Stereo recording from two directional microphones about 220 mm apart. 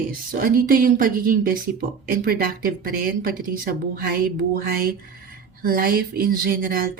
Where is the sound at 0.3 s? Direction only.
40° right (ahead or behind).